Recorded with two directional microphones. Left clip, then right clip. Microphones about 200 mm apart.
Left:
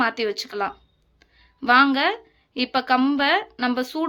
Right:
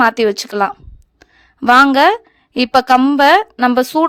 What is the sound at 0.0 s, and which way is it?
A woman's voice, 50° right (ahead or behind).